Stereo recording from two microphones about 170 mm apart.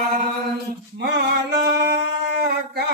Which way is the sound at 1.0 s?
75° right (ahead or behind).